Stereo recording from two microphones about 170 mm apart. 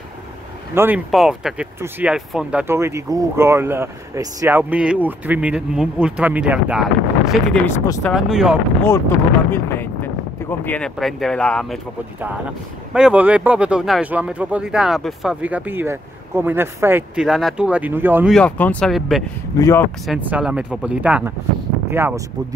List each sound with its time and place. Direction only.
0.7 s speech: 10° right (ahead or behind)
2.6 s speech: 15° right (ahead or behind)
7.6 s speech: 20° left (ahead or behind)
8.0 s speech: centre (ahead or behind)
9.5 s speech: 15° left (ahead or behind)
12.9 s speech: 5° right (ahead or behind)
18.3 s speech: 10° left (ahead or behind)
19.6 s speech: 15° left (ahead or behind)
20.1 s speech: 10° right (ahead or behind)